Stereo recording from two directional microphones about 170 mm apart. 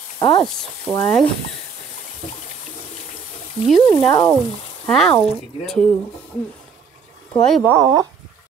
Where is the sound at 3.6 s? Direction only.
Centre (ahead or behind).